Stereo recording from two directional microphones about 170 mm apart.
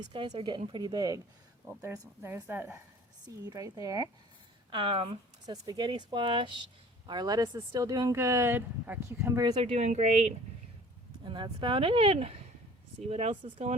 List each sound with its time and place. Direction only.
0.0 s speech: 25° right (ahead or behind)
4.7 s speech: 30° right (ahead or behind)
11.3 s speech: 30° right (ahead or behind)